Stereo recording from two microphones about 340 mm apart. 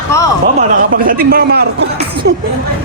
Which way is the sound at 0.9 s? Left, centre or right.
Right.